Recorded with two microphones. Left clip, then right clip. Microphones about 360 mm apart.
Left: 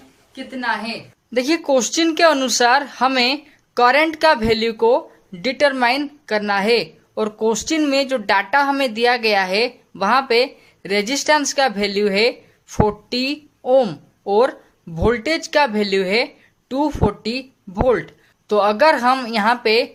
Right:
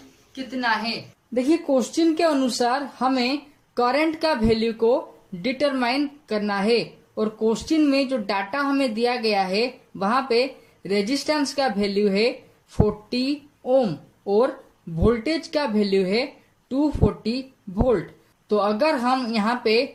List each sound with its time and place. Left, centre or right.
0.3 s a woman's voice: centre
1.3 s speech: left
18.4 s speech: left